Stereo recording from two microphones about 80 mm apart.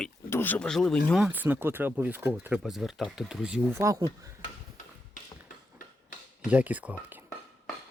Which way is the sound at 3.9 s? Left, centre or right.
Right.